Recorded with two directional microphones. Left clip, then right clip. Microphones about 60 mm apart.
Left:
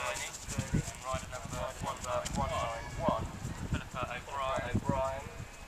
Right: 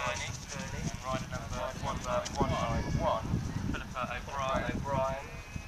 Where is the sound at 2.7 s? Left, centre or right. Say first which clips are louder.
Right 2 dB; right.